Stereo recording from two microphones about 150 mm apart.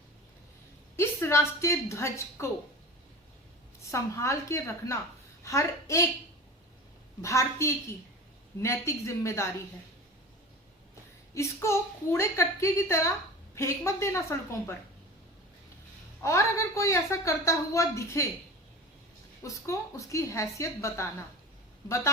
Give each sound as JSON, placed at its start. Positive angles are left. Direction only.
{"t": 0.9, "sound": "a woman's voice", "side_deg": 20}
{"t": 3.9, "sound": "a woman's voice", "side_deg": 20}
{"t": 7.2, "sound": "a woman's voice", "side_deg": 20}
{"t": 11.3, "sound": "a woman's voice", "side_deg": 20}
{"t": 16.2, "sound": "a woman's voice", "side_deg": 20}
{"t": 19.4, "sound": "a woman's voice", "side_deg": 20}